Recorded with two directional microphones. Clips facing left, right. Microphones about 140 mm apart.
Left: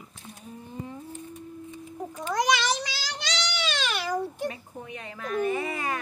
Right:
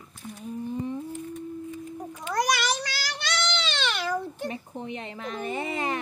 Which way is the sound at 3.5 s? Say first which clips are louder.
Right 1 dB; 10° left (ahead or behind).